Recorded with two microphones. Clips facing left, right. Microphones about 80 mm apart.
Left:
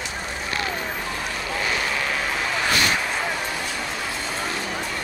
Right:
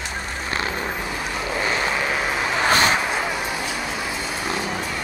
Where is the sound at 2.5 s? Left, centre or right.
Right.